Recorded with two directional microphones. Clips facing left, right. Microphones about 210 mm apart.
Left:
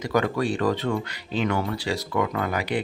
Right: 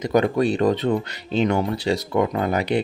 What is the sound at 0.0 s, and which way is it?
Speech, 20° right (ahead or behind).